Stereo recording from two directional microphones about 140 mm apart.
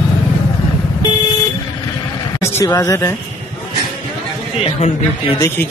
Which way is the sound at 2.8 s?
20° left (ahead or behind).